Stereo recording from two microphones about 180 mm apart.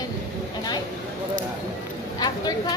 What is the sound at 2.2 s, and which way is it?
Speech, 20° left (ahead or behind).